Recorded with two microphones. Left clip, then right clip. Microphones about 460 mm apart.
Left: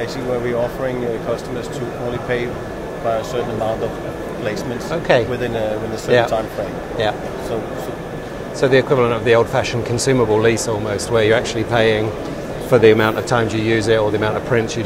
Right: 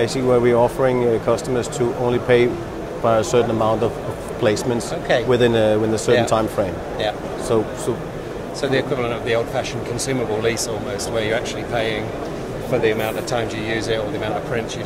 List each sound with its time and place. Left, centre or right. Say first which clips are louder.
0.0 s speech: right 5 dB; right
5.3 s speech: right 5 dB; right
8.5 s speech: left 7 dB; left
11.1 s speech: left 7 dB; left